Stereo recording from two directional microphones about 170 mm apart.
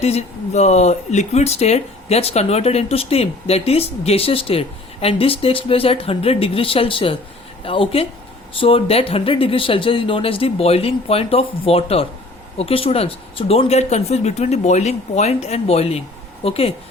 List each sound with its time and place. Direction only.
0.0 s speech: 40° left (ahead or behind)